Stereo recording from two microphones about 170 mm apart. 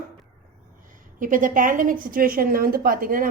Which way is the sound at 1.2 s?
50° right (ahead or behind).